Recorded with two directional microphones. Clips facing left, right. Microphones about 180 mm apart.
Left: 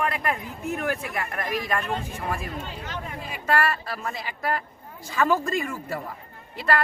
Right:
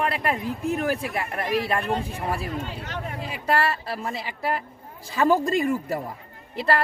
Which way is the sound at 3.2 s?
30° right (ahead or behind).